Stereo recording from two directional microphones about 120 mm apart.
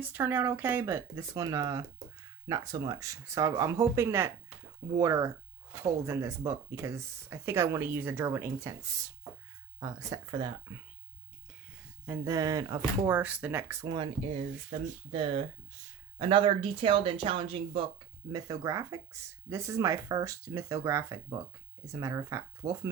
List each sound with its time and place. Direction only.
0.0 s speech: 15° right (ahead or behind); by 10.8 s 35° right (ahead or behind)
12.0 s speech: 20° right (ahead or behind)
13.1 s speech: 15° right (ahead or behind)
13.8 s speech: 40° right (ahead or behind)
18.3 s speech: 30° right (ahead or behind)